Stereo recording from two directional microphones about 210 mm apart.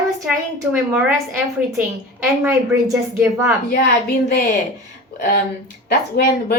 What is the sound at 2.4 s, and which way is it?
A woman's voice, 10° right (ahead or behind).